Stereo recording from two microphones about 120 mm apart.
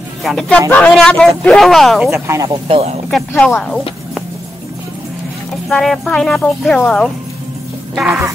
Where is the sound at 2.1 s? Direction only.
25° right (ahead or behind).